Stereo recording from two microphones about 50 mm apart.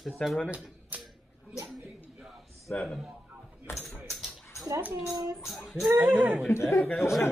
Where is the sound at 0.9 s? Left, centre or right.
Right.